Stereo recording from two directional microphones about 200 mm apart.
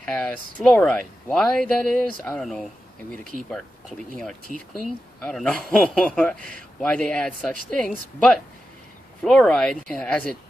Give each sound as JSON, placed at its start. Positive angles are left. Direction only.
{"t": 0.0, "sound": "speech", "side_deg": 5}
{"t": 4.5, "sound": "speech", "side_deg": 40}
{"t": 5.2, "sound": "speech", "side_deg": 5}